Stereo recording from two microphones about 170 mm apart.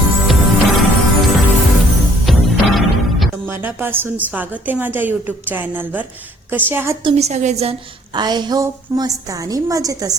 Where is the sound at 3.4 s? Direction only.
10° right (ahead or behind).